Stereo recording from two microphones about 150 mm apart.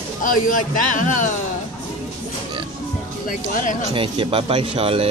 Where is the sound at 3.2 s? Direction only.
65° left (ahead or behind).